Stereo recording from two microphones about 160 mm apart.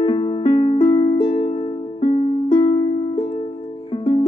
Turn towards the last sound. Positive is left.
turn(degrees=35)  # may be behind; listen again after turning